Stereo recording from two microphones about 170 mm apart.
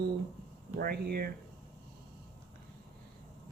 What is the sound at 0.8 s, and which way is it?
Speech, 65° right (ahead or behind).